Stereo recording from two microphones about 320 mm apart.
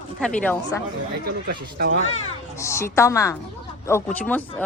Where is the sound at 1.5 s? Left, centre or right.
Right.